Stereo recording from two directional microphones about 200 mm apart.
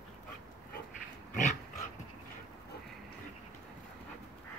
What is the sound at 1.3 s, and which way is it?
Dog, 35° left (ahead or behind).